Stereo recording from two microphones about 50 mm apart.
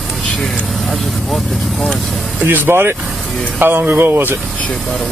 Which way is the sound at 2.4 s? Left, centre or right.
Right.